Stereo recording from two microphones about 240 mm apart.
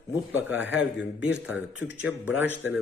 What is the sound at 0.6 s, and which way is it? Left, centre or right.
Speech, left.